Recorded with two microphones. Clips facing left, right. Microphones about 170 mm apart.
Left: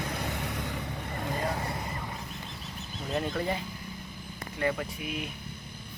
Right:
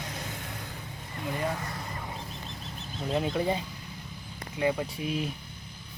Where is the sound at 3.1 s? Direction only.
10° right (ahead or behind).